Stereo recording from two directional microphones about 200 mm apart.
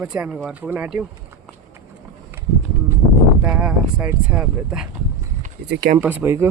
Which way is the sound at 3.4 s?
5° right (ahead or behind).